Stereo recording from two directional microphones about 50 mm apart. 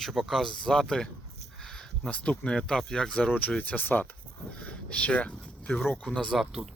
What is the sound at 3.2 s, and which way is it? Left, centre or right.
Speech, left.